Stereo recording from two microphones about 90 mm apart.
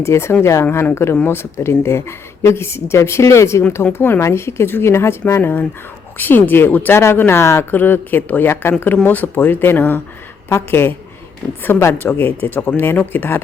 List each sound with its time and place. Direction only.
0.0 s speech: 30° left (ahead or behind)